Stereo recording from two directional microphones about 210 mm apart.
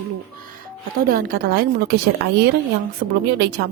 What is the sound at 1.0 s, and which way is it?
Speech, 45° right (ahead or behind).